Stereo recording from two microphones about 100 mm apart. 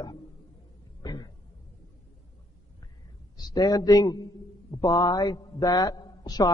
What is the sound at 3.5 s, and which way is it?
A man's voice, 40° left (ahead or behind).